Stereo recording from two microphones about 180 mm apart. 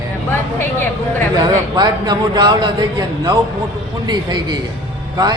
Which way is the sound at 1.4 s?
25° right (ahead or behind).